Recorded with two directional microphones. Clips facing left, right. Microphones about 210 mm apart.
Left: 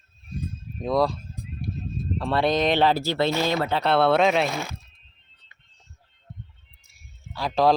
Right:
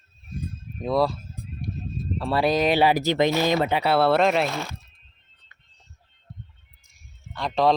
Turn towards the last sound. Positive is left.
turn(degrees=0)  # may be behind; listen again after turning